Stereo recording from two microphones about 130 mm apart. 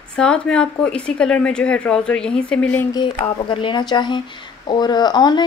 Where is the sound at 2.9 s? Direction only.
40° left (ahead or behind).